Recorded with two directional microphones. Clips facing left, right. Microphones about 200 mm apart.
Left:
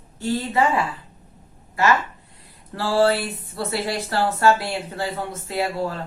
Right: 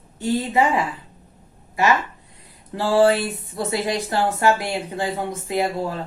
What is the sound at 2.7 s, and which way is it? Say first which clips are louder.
Speech: right 2 dB; 20° right (ahead or behind).